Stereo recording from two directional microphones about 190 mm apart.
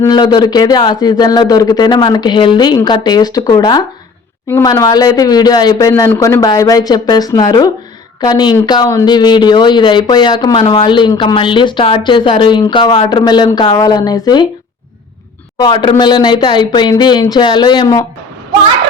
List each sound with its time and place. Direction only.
0.0 s speech: 25° left (ahead or behind)
15.5 s speech: 25° left (ahead or behind)